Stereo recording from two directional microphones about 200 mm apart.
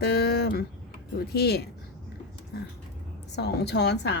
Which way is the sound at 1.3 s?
50° left (ahead or behind).